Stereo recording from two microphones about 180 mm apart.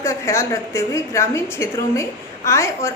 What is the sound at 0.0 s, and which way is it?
A woman's voice, 15° left (ahead or behind).